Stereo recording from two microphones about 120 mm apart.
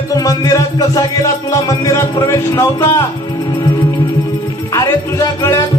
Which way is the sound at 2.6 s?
25° left (ahead or behind).